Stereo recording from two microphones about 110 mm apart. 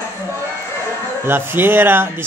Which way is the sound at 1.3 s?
20° right (ahead or behind).